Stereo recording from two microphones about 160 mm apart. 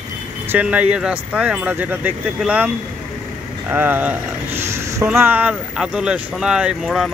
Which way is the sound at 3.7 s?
10° right (ahead or behind).